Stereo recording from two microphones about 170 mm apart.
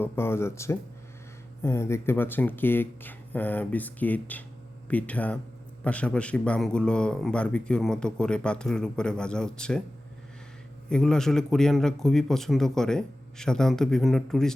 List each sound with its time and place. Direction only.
0.0 s a man's voice: 15° left (ahead or behind)
10.8 s a man's voice: 5° left (ahead or behind)